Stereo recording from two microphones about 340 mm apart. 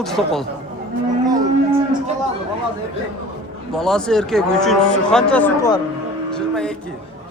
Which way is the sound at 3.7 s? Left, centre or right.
Centre.